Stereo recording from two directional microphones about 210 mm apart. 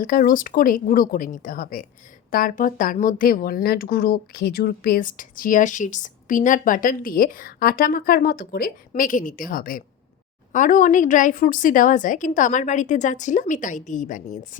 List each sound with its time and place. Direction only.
0.0 s speech: 40° left (ahead or behind)